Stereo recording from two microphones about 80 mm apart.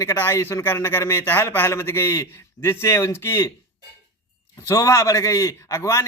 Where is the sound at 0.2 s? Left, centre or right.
Left.